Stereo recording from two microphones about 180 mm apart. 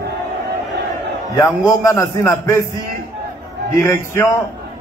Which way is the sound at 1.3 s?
15° left (ahead or behind).